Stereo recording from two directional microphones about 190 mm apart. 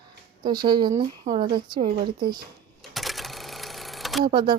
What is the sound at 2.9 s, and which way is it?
Sewing machine, centre (ahead or behind).